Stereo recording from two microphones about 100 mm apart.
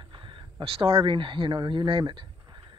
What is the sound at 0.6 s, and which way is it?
Speech, 65° right (ahead or behind).